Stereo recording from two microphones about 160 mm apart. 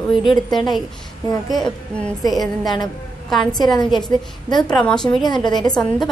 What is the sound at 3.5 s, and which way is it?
A woman's voice, 25° left (ahead or behind).